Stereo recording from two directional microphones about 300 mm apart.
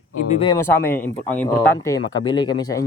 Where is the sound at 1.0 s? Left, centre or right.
Centre.